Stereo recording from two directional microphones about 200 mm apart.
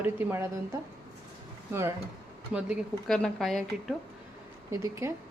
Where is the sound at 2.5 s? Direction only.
5° right (ahead or behind).